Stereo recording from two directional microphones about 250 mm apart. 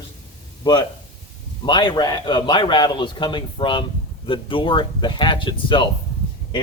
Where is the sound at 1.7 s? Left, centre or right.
Centre.